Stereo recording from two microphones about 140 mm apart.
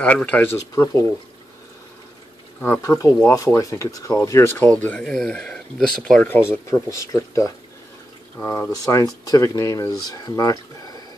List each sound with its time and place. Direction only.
0.0 s speech: 10° left (ahead or behind)
2.6 s speech: 15° left (ahead or behind)
4.6 s speech: 10° left (ahead or behind)
6.2 s speech: 15° left (ahead or behind)